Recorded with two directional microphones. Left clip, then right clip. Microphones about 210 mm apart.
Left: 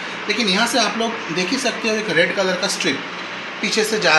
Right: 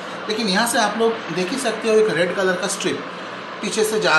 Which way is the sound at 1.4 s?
10° left (ahead or behind).